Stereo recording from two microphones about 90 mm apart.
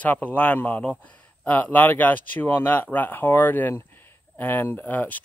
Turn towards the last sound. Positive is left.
turn(degrees=20)  # may be behind; listen again after turning